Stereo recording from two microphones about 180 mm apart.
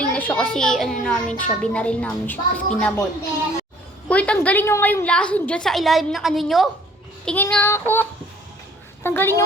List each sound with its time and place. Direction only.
0.0 s a child's voice: 10° left (ahead or behind)
4.1 s a woman's voice: 5° left (ahead or behind)
9.0 s a child's voice: 15° left (ahead or behind)